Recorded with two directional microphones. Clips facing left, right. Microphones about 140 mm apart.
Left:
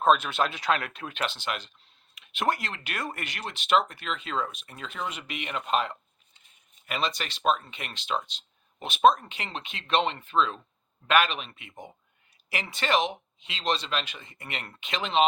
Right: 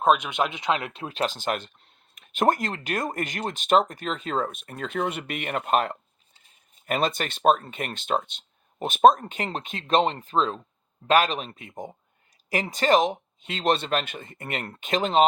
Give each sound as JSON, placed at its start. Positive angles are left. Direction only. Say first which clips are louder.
{"t": 0.0, "sound": "speech", "louder": "right 1 dB", "side_deg": -15}